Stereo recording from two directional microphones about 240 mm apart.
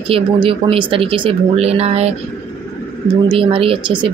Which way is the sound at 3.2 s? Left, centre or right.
Right.